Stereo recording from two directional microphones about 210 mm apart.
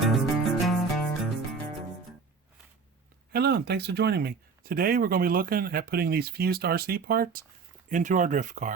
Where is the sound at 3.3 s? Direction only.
50° right (ahead or behind).